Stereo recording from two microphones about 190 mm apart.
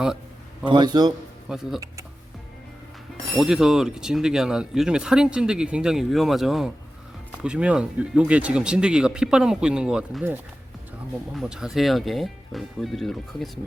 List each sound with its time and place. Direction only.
0.7 s a man's voice: 20° right (ahead or behind)
1.5 s speech: centre (ahead or behind)
3.3 s speech: centre (ahead or behind)
11.3 s speech: 5° right (ahead or behind)